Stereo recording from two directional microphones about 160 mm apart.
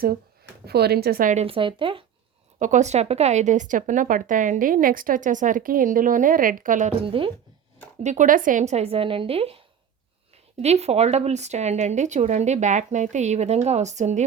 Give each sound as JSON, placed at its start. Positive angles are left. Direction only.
{"t": 0.6, "sound": "a woman's voice", "side_deg": -85}
{"t": 1.5, "sound": "a woman's voice", "side_deg": -30}
{"t": 2.6, "sound": "speech", "side_deg": -50}
{"t": 7.0, "sound": "a woman's voice", "side_deg": -35}
{"t": 8.0, "sound": "a woman's voice", "side_deg": -50}